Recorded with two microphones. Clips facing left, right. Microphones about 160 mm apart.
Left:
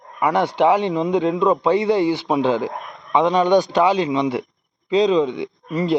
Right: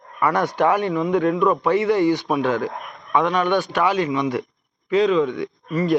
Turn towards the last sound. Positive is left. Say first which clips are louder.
# even
turn(degrees=10)  # may be behind; listen again after turning